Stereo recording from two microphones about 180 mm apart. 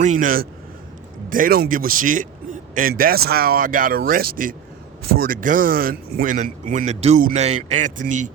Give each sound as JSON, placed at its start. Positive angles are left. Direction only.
{"t": 0.0, "sound": "a man's voice", "side_deg": -45}